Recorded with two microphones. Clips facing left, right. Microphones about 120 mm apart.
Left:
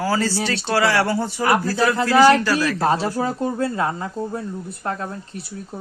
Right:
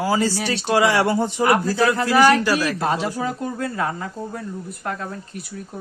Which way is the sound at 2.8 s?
35° left (ahead or behind).